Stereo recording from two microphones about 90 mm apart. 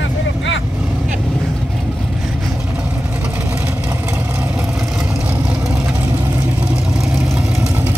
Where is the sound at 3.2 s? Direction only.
15° right (ahead or behind).